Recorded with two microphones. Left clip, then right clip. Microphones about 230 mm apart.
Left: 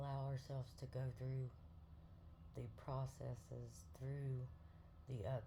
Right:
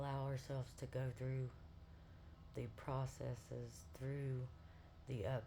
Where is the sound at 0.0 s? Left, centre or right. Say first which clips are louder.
Right 4 dB; right.